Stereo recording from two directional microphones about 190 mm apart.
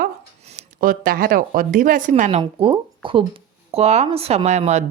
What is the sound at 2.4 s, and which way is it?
Speech, 25° right (ahead or behind).